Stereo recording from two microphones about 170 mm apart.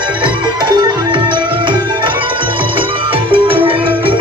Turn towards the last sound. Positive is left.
turn(degrees=-30)  # may be behind; listen again after turning